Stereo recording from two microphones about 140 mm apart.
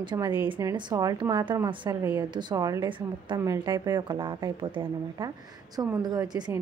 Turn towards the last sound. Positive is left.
turn(degrees=-30)  # may be behind; listen again after turning